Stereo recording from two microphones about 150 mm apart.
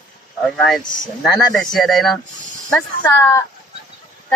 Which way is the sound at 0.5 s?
5° left (ahead or behind).